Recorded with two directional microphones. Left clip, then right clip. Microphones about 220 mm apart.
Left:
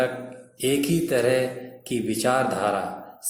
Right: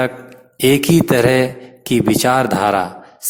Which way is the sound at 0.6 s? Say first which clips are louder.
Right 10 dB; 45° right (ahead or behind).